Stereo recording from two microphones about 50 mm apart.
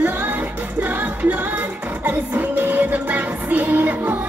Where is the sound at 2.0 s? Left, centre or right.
Right.